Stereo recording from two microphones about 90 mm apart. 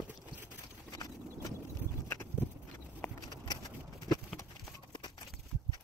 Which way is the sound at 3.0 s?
20° left (ahead or behind).